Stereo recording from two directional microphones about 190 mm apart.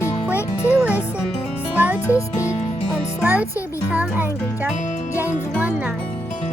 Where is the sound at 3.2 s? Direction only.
10° right (ahead or behind).